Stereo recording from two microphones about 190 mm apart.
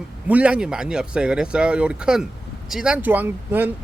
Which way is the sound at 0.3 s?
5° right (ahead or behind).